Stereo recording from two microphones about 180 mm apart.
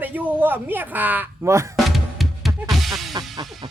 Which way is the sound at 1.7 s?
Centre (ahead or behind).